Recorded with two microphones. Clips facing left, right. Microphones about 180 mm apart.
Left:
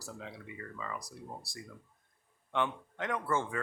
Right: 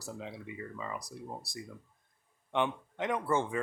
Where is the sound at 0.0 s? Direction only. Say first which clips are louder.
Right 3 dB; 20° right (ahead or behind).